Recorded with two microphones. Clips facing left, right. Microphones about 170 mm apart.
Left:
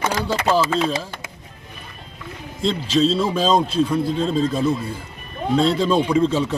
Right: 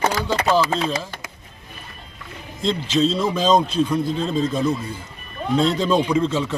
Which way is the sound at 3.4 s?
30° left (ahead or behind).